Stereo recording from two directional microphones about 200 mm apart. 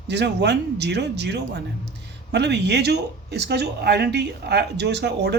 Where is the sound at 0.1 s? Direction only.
60° right (ahead or behind).